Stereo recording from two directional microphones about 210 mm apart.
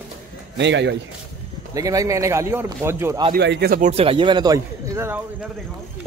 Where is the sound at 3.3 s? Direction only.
50° right (ahead or behind).